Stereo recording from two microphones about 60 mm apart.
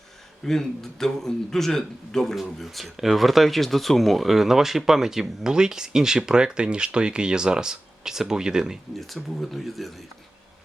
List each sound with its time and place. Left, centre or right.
0.4 s a man's voice: centre
9.4 s a man's voice: centre